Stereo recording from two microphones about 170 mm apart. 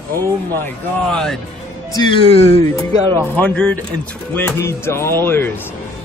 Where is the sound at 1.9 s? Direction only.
25° left (ahead or behind).